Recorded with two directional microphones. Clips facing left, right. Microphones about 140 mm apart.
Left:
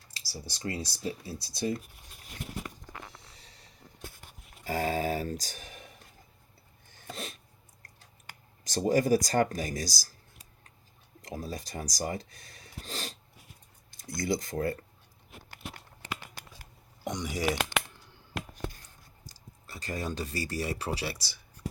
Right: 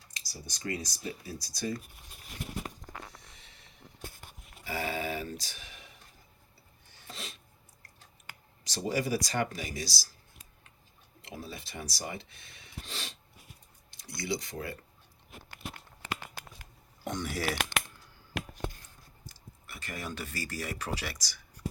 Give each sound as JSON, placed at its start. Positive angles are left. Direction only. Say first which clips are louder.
{"t": 0.1, "sound": "speech", "louder": "left 3 dB", "side_deg": 30}
{"t": 3.3, "sound": "vehicle", "louder": "left 2 dB", "side_deg": 35}
{"t": 4.6, "sound": "speech", "louder": "left 5 dB", "side_deg": 40}
{"t": 6.9, "sound": "a sound", "louder": "left 5 dB", "side_deg": 50}
{"t": 8.6, "sound": "speech", "louder": "left 6 dB", "side_deg": 45}
{"t": 11.2, "sound": "speech", "louder": "left 5 dB", "side_deg": 40}
{"t": 17.0, "sound": "speech", "louder": "left 2 dB", "side_deg": 15}
{"t": 19.6, "sound": "speech", "louder": "left 5 dB", "side_deg": 35}